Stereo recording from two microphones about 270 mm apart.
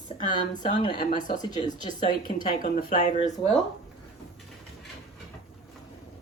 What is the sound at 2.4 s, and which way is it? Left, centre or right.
Speech, left.